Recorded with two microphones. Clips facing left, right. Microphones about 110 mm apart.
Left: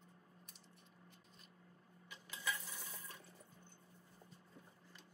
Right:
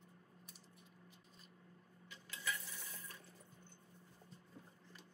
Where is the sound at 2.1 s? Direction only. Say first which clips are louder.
Left 1 dB; 20° left (ahead or behind).